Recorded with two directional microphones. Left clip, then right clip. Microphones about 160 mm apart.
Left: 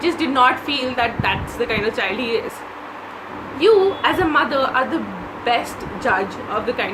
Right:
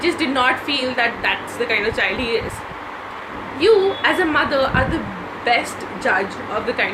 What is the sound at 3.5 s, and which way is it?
A woman's voice, 20° left (ahead or behind).